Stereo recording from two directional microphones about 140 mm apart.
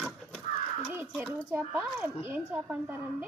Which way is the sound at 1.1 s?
5° right (ahead or behind).